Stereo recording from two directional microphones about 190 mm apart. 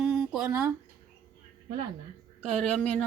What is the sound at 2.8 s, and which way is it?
Speech, 5° left (ahead or behind).